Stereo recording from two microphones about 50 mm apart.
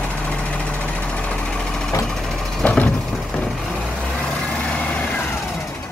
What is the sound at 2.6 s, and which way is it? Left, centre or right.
Vehicle, left.